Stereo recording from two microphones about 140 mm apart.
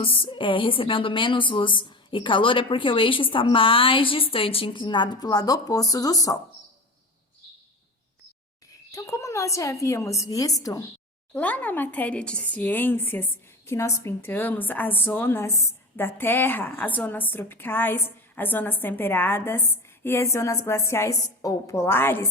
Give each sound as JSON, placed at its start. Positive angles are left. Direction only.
{"t": 0.0, "sound": "a woman's voice", "side_deg": 40}
{"t": 8.9, "sound": "a woman's voice", "side_deg": 25}
{"t": 11.3, "sound": "a woman's voice", "side_deg": 10}